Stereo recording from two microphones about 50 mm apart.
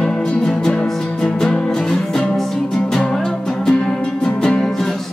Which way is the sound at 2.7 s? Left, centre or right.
Centre.